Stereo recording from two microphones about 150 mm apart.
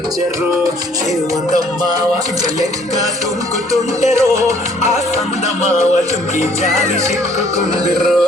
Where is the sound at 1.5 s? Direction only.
25° right (ahead or behind).